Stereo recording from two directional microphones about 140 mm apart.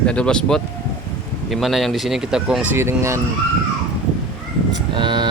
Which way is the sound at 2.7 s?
20° right (ahead or behind).